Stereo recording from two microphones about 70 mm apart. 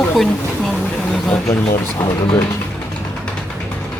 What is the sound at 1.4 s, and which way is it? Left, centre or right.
Speech, left.